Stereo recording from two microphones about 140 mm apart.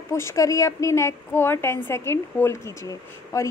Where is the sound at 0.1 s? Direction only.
20° left (ahead or behind).